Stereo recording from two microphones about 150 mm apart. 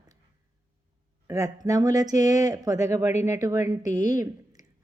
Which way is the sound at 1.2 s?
20° right (ahead or behind).